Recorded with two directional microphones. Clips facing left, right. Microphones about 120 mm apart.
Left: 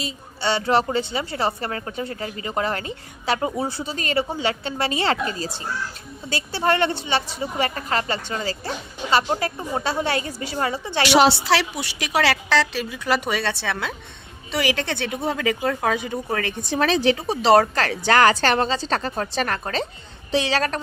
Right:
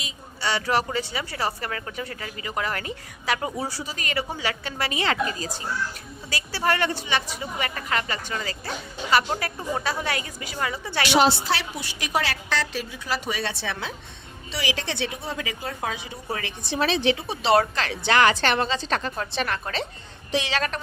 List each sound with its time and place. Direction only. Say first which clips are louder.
0.0 s a woman's voice: left 4 dB; 30° left (ahead or behind)
11.0 s a woman's voice: left 3 dB; 75° left (ahead or behind); by 20.8 s 35° left (ahead or behind)